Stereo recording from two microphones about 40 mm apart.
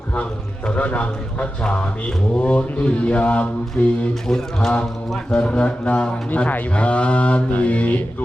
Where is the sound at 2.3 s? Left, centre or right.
Left.